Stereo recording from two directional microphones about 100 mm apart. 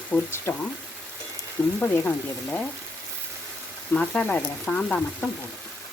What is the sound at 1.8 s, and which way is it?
Speech, 15° left (ahead or behind).